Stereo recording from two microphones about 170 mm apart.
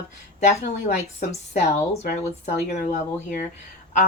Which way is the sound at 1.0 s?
45° left (ahead or behind).